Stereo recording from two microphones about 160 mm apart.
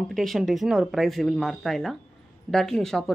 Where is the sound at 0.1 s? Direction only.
Centre (ahead or behind).